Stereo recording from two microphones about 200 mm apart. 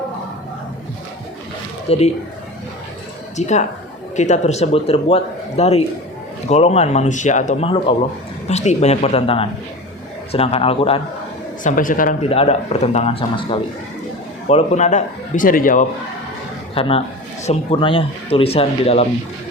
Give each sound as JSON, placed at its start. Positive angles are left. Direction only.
{"t": 1.9, "sound": "speech", "side_deg": 30}
{"t": 3.3, "sound": "speech", "side_deg": 35}
{"t": 11.6, "sound": "speech", "side_deg": 40}
{"t": 12.3, "sound": "speech", "side_deg": 30}
{"t": 16.7, "sound": "a man's voice", "side_deg": 30}